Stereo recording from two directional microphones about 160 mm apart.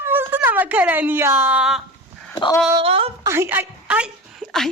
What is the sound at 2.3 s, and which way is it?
Speech, 25° left (ahead or behind).